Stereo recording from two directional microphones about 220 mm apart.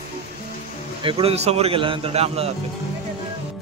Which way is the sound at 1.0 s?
25° right (ahead or behind).